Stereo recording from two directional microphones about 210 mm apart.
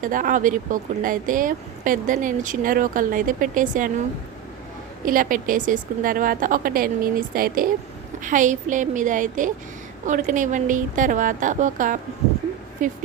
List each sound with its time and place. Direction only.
0.0 s speech: 40° right (ahead or behind)
5.0 s speech: 40° right (ahead or behind)